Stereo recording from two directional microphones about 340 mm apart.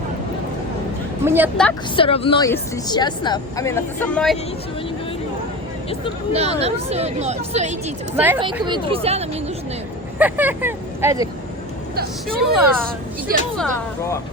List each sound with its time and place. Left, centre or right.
1.2 s a woman's voice: centre
2.0 s a woman's voice: centre
6.3 s speech: centre
8.1 s speech: centre
10.2 s speech: centre
12.5 s a woman's voice: centre